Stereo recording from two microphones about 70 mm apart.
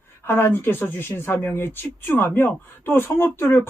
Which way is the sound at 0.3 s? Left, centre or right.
Left.